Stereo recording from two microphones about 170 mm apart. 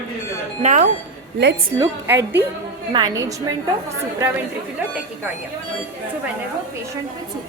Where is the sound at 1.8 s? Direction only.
15° right (ahead or behind).